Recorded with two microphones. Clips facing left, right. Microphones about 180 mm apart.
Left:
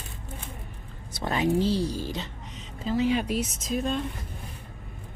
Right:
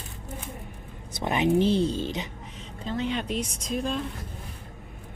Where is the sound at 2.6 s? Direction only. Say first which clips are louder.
Left 4 dB; 5° left (ahead or behind).